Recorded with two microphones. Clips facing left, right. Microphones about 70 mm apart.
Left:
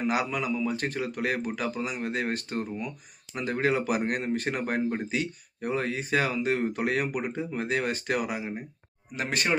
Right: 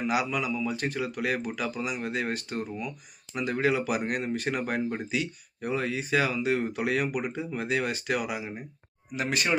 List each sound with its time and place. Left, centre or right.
0.0 s speech: left